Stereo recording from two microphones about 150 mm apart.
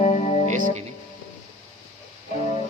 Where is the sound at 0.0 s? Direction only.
50° left (ahead or behind).